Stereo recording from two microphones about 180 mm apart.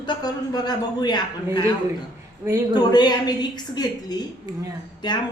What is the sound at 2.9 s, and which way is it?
A woman's voice, 25° left (ahead or behind).